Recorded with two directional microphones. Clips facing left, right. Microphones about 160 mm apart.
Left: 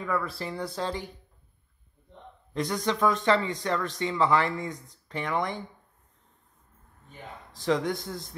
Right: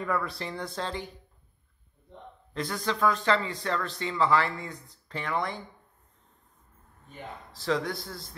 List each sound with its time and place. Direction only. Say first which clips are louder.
0.0 s speech: even; centre (ahead or behind)
2.5 s speech: left 3 dB; 15° left (ahead or behind)
7.5 s a man's voice: left 3 dB; 20° left (ahead or behind)